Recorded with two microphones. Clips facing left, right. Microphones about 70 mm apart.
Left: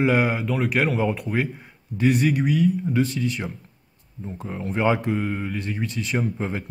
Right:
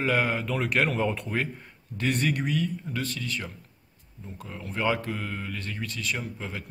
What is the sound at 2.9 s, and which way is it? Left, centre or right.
Speech, centre.